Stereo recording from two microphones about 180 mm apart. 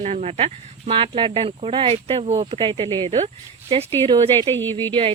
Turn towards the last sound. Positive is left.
turn(degrees=-25)  # may be behind; listen again after turning